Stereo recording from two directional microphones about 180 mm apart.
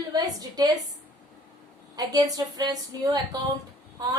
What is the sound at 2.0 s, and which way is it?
A woman's voice, 20° right (ahead or behind).